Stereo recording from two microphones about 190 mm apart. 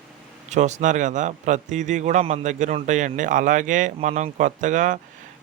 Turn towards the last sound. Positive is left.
turn(degrees=-40)  # may be behind; listen again after turning